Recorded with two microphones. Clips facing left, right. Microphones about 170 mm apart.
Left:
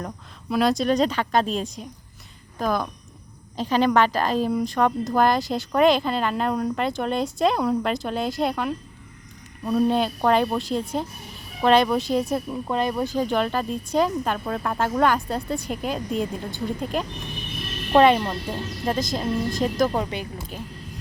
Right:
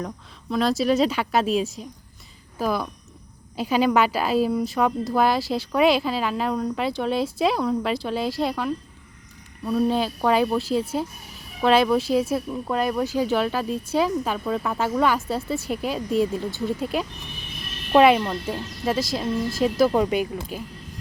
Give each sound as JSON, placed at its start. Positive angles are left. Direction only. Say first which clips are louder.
{"t": 0.5, "sound": "speech", "louder": "even", "side_deg": 0}